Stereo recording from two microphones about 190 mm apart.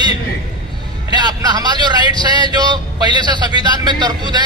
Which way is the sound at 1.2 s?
20° right (ahead or behind).